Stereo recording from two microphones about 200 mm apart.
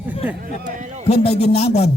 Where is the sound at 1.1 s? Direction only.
30° left (ahead or behind).